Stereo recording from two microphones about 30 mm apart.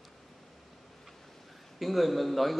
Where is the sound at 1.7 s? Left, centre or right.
Centre.